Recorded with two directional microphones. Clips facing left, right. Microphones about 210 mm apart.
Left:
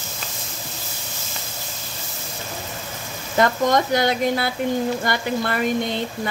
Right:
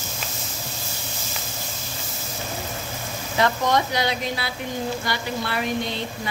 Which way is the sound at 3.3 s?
50° left (ahead or behind).